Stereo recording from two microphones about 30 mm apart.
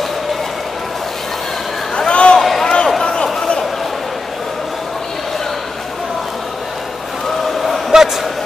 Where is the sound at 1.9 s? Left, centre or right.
Left.